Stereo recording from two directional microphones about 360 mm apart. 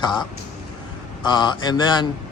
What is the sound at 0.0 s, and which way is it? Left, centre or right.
Speech, centre.